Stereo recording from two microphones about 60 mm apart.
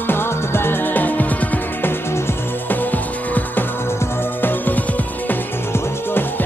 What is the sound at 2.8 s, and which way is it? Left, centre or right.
Music, left.